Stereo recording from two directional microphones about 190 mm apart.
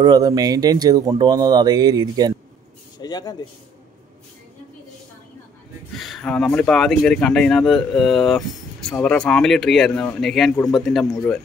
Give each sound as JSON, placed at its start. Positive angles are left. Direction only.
{"t": 0.0, "sound": "speech", "side_deg": -20}
{"t": 3.0, "sound": "speech", "side_deg": 20}
{"t": 5.9, "sound": "speech", "side_deg": 0}